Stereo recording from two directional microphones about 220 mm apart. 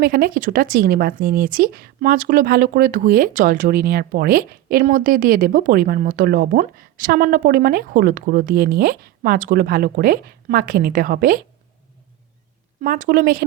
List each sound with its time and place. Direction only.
0.0 s speech: 40° right (ahead or behind)
12.8 s speech: 40° right (ahead or behind)